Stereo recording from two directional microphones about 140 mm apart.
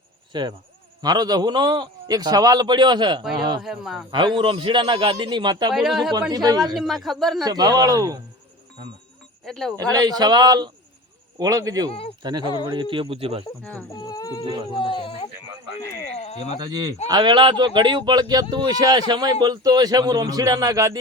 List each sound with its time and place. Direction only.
1.0 s a man's voice: 30° right (ahead or behind)
3.6 s speech: centre (ahead or behind)
4.1 s a man's voice: 35° right (ahead or behind)
5.7 s speech: centre (ahead or behind)
6.3 s speech: 30° right (ahead or behind)
6.7 s speech: centre (ahead or behind)
7.4 s speech: 30° right (ahead or behind)
9.4 s speech: 5° left (ahead or behind)
9.8 s speech: 25° right (ahead or behind)
11.9 s speech: 45° left (ahead or behind)
12.2 s a man's voice: 30° right (ahead or behind)
13.9 s speech: 30° left (ahead or behind)
16.0 s a sound: 50° left (ahead or behind)
16.6 s speech: 30° right (ahead or behind)